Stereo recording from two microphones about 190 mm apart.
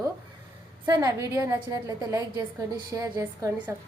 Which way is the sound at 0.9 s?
20° right (ahead or behind).